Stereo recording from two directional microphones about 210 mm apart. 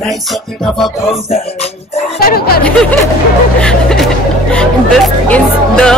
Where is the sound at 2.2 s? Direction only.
45° left (ahead or behind).